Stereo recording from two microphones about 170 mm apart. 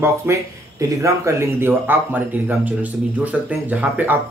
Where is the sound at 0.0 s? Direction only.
15° right (ahead or behind).